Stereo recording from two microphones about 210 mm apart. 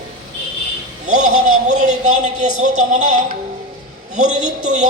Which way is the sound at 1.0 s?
35° right (ahead or behind).